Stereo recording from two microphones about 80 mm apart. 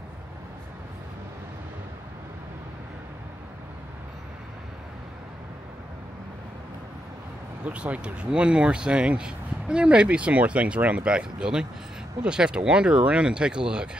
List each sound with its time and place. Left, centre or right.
7.6 s speech: centre